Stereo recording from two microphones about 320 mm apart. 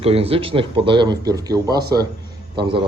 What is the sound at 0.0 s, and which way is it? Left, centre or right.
A man's voice, centre.